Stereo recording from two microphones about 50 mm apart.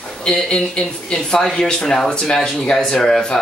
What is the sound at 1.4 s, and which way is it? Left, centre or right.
Speech, centre.